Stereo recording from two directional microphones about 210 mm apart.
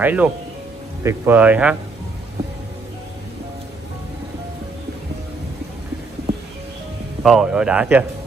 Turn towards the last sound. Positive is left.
turn(degrees=-5)  # may be behind; listen again after turning